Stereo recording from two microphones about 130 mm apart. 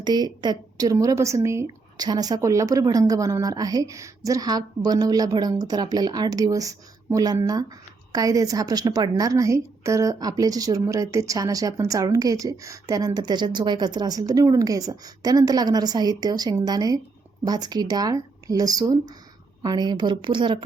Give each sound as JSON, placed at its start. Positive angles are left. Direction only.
{"t": 0.0, "sound": "a woman's voice", "side_deg": -35}